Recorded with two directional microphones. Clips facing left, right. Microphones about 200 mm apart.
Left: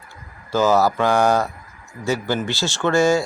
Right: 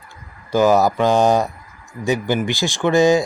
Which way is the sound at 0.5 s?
15° right (ahead or behind).